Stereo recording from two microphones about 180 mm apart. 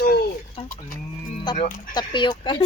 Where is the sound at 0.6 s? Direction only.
35° left (ahead or behind).